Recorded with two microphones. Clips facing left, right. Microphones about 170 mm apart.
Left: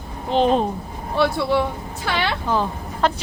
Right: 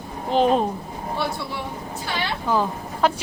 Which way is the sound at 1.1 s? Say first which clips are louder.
Left 10 dB; 80° left.